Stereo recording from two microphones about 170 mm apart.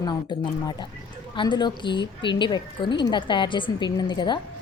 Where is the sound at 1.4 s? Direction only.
25° left (ahead or behind).